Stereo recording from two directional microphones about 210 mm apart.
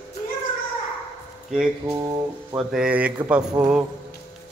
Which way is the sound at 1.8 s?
15° right (ahead or behind).